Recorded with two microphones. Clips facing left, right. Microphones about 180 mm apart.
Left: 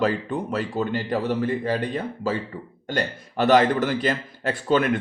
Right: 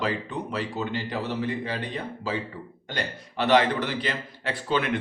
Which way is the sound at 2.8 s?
45° left (ahead or behind).